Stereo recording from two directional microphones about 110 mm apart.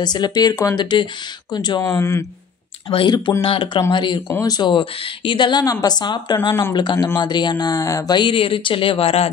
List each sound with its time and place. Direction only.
0.0 s a woman's voice: 40° left (ahead or behind)
1.8 s speech: 25° left (ahead or behind)
2.9 s a woman's voice: 50° left (ahead or behind)